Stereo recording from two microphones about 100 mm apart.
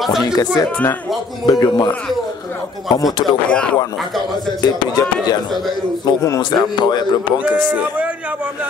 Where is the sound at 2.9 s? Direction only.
40° left (ahead or behind).